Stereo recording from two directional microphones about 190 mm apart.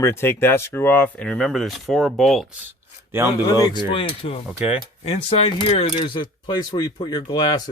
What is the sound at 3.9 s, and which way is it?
Speech, 30° left (ahead or behind).